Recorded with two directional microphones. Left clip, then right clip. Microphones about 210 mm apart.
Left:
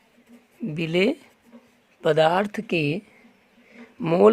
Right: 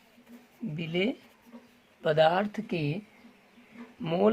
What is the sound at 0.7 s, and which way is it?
Speech, 45° left (ahead or behind).